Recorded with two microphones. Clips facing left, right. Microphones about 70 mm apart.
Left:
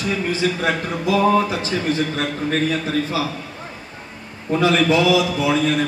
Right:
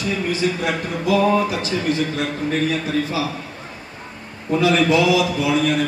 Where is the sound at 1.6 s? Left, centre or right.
Left.